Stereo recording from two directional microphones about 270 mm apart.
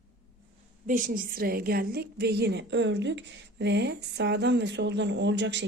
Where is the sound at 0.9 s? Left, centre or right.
Right.